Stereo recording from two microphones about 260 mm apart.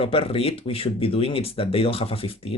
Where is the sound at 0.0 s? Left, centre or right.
Left.